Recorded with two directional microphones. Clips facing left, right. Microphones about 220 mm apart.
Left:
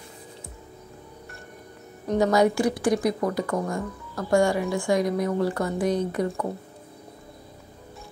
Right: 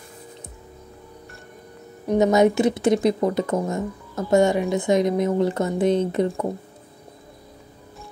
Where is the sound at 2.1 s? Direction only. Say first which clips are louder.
Right 3 dB; 20° right (ahead or behind).